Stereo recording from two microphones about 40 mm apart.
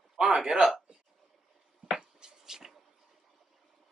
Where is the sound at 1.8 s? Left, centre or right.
Centre.